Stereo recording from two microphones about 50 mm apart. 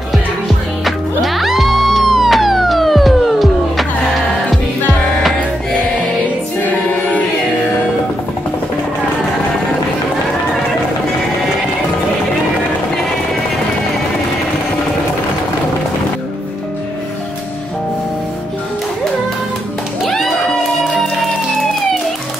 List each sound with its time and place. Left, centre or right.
0.8 s music: centre
6.6 s music: left
20.0 s music: centre